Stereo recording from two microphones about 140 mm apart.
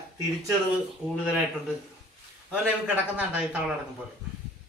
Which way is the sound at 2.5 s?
10° right (ahead or behind).